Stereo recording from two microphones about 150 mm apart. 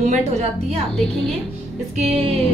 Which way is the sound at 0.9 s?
5° left (ahead or behind).